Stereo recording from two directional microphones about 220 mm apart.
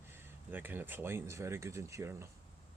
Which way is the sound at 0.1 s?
10° right (ahead or behind).